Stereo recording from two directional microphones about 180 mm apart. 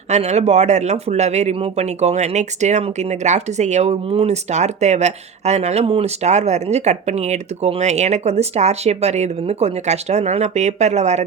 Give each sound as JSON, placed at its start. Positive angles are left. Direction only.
{"t": 0.1, "sound": "speech", "side_deg": -40}